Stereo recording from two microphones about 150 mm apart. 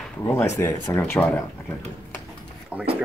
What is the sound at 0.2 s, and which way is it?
Speech, 15° left (ahead or behind).